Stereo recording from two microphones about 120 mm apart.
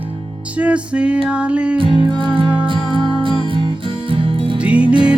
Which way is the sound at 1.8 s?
45° right (ahead or behind).